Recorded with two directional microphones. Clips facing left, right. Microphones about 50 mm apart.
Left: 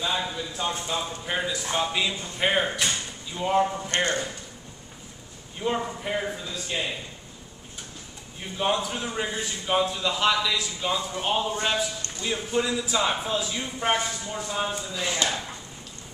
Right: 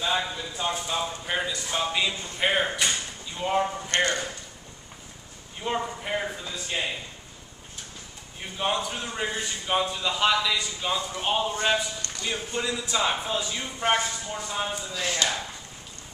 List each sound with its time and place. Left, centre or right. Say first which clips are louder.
0.0 s a man's voice: right 1 dB; centre
5.6 s a man's voice: left 2 dB; centre
8.4 s a man's voice: left 2 dB; centre
15.0 s speech: even; centre